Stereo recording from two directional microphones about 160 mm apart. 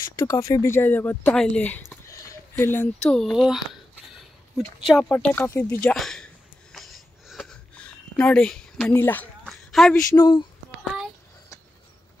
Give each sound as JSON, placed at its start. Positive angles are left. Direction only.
{"t": 0.0, "sound": "speech", "side_deg": 20}
{"t": 5.9, "sound": "a sound", "side_deg": 5}
{"t": 10.1, "sound": "speech", "side_deg": 25}